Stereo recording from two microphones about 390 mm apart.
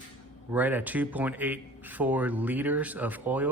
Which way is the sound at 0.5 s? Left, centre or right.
Centre.